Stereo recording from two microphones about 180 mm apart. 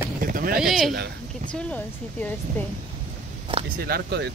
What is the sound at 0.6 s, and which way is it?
Speech, centre (ahead or behind).